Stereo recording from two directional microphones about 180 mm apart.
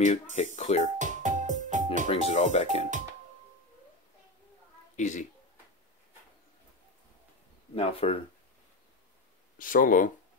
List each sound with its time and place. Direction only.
0.0 s speech: 40° left (ahead or behind)
0.9 s music: 45° right (ahead or behind)
2.0 s speech: 35° left (ahead or behind)
4.9 s speech: 40° left (ahead or behind)
7.7 s speech: 35° left (ahead or behind)
9.6 s speech: 50° left (ahead or behind)